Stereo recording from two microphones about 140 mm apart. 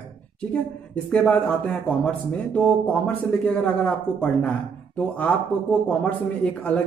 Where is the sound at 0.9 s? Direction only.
5° left (ahead or behind).